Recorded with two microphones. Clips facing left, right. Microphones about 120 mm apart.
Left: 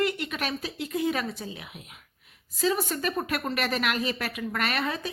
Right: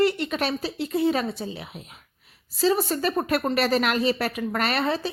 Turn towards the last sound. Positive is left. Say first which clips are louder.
# right 5 dB
turn(degrees=-35)  # may be behind; listen again after turning